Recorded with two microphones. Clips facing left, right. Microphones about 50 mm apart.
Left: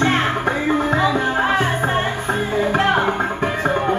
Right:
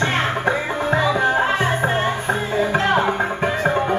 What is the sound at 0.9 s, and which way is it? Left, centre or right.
Music, centre.